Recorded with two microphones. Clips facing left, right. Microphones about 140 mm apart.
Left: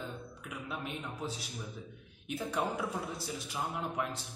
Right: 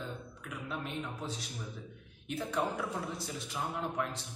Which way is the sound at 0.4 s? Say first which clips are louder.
Right 1 dB; 5° left (ahead or behind).